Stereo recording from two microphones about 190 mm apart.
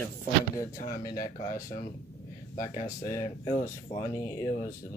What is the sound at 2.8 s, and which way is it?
Speech, 15° left (ahead or behind).